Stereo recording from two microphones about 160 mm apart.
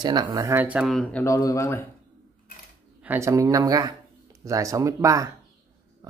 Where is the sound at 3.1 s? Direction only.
20° right (ahead or behind).